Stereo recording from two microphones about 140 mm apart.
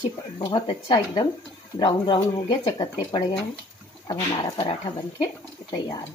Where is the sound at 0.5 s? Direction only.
35° left (ahead or behind).